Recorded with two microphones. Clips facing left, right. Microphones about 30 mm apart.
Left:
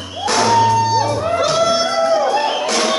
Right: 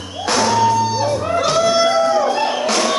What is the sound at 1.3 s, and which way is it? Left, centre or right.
Music, centre.